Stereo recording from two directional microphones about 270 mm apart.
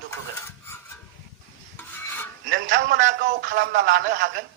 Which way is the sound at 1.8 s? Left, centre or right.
Centre.